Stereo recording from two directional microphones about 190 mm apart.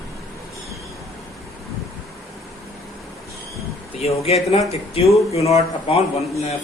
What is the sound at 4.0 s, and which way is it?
Speech, 30° left (ahead or behind).